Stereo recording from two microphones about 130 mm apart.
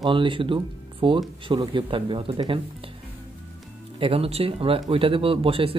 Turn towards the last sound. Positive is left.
turn(degrees=-45)  # may be behind; listen again after turning